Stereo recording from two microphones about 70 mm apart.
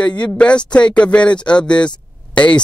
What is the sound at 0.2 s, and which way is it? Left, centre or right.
Speech, centre.